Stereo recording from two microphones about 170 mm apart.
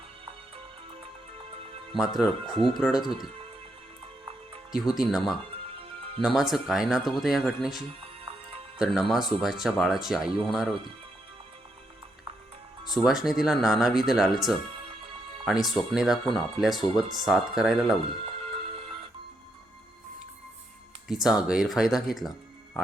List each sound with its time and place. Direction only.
1.9 s speech: centre (ahead or behind)
4.7 s speech: centre (ahead or behind)
12.8 s speech: centre (ahead or behind)
15.6 s speech: centre (ahead or behind)
18.3 s music: 35° right (ahead or behind)
21.1 s speech: centre (ahead or behind)